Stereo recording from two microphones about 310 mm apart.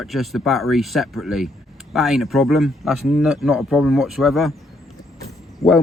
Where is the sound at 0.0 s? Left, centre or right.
Centre.